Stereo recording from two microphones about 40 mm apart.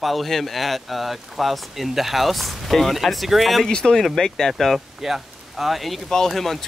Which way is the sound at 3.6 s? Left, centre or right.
Centre.